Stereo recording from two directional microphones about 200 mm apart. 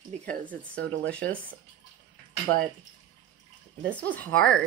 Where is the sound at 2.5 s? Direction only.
65° right (ahead or behind).